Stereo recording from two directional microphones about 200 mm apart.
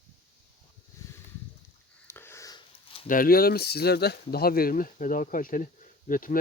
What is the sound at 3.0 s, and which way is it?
Speech, 45° left (ahead or behind).